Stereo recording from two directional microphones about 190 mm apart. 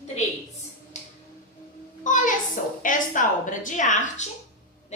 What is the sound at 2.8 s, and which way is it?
A woman's voice, 45° left (ahead or behind).